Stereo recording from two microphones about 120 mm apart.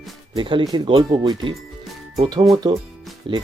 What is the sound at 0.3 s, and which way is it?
Speech, 45° right (ahead or behind).